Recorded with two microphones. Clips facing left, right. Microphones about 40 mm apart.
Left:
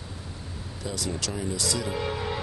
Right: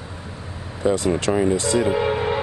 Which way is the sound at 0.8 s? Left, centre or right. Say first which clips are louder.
Right 13 dB; right.